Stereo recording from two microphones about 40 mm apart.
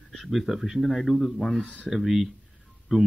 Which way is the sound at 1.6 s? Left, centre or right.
Left.